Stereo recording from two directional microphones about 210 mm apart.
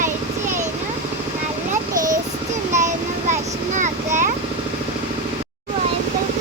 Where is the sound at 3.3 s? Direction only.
35° right (ahead or behind).